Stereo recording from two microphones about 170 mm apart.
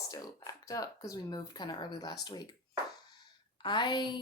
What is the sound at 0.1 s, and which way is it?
Speech, 20° left (ahead or behind).